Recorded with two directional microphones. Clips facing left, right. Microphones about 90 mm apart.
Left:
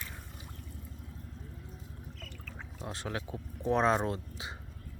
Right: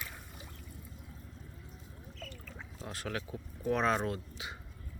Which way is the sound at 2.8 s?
25° left (ahead or behind).